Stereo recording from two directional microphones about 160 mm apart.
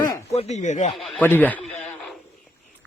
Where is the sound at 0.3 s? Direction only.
45° left (ahead or behind).